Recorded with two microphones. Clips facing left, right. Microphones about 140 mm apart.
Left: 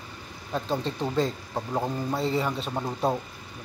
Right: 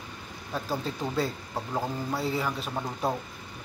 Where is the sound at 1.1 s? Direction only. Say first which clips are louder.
Left 3 dB; 5° right (ahead or behind).